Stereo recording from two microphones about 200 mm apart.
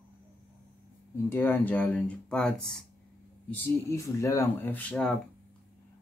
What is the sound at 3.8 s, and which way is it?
Speech, 15° left (ahead or behind).